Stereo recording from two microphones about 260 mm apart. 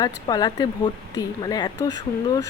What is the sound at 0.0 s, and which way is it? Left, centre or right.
Speech, centre.